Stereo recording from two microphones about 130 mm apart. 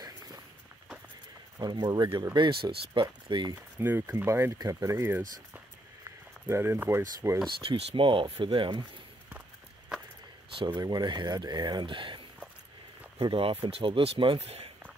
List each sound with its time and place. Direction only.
1.6 s speech: 30° right (ahead or behind)
3.5 s speech: 15° right (ahead or behind)
6.4 s speech: 20° right (ahead or behind)
7.4 s speech: 45° right (ahead or behind)
10.5 s speech: 40° right (ahead or behind)
13.2 s speech: 45° right (ahead or behind)